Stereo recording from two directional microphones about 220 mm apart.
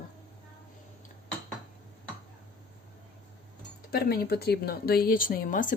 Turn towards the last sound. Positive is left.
turn(degrees=35)  # may be behind; listen again after turning